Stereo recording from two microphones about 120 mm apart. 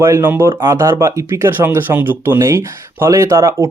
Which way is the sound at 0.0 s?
20° right (ahead or behind).